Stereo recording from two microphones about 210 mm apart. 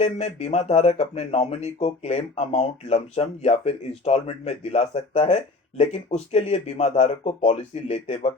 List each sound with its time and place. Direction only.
0.0 s speech: 30° left (ahead or behind)